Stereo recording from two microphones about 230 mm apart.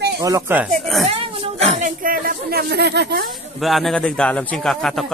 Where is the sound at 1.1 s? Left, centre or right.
Right.